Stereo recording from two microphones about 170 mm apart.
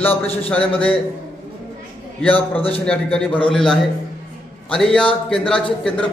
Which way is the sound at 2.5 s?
35° left (ahead or behind).